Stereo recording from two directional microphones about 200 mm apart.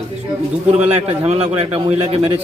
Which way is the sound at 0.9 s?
30° right (ahead or behind).